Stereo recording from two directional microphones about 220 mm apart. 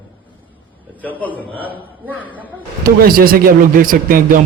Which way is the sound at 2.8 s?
40° right (ahead or behind).